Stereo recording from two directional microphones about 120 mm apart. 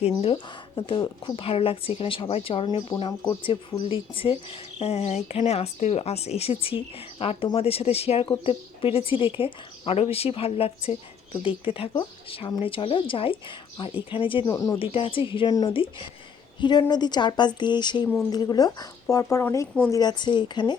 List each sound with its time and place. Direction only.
0.0 s speech: 55° left (ahead or behind)
0.8 s speech: 40° left (ahead or behind)
2.6 s speech: 35° left (ahead or behind); by 4.4 s 50° left (ahead or behind)
4.8 s speech: 60° left (ahead or behind)
14.5 s speech: 25° left (ahead or behind)
14.8 s a woman's voice: 50° left (ahead or behind); by 19.6 s 25° left (ahead or behind)
19.9 s speech: 35° left (ahead or behind)